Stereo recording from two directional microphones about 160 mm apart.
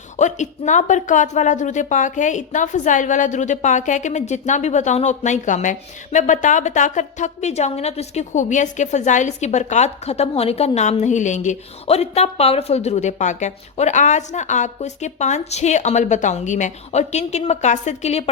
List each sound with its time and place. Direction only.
0.2 s speech: 50° left (ahead or behind)